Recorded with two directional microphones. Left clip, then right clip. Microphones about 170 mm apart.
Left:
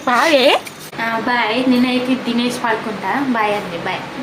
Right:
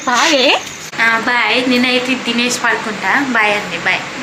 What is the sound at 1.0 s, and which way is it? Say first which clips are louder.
A woman's voice: right 5 dB; 10° left (ahead or behind).